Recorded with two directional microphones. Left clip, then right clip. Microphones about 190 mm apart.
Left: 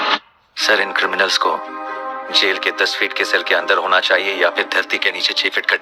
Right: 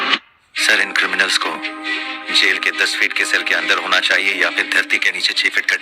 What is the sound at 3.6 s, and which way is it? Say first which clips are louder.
Speech: left 1 dB; 35° left (ahead or behind).